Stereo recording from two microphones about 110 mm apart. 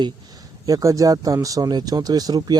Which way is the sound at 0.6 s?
30° right (ahead or behind).